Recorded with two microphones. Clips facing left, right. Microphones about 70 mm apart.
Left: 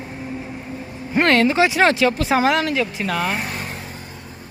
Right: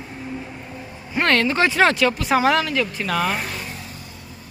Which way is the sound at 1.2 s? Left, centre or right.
Centre.